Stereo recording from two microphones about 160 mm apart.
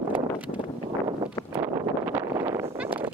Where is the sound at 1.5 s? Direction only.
15° right (ahead or behind).